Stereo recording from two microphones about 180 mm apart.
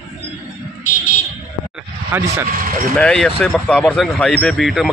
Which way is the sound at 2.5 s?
50° right (ahead or behind).